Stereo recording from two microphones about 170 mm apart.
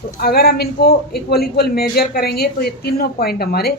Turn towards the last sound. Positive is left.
turn(degrees=65)  # may be behind; listen again after turning